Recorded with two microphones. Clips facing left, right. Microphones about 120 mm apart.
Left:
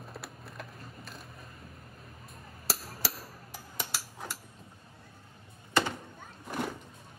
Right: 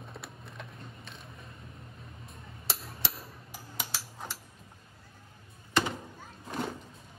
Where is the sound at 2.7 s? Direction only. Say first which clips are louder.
Left 2 dB; centre (ahead or behind).